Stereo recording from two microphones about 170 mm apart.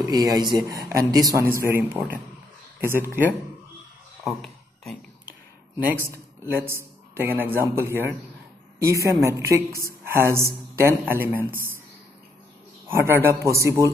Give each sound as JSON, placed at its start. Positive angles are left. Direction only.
{"t": 0.0, "sound": "a woman's voice", "side_deg": -25}
{"t": 4.2, "sound": "a sound", "side_deg": 0}
{"t": 6.0, "sound": "a man's voice", "side_deg": -15}
{"t": 12.8, "sound": "a woman's voice", "side_deg": -15}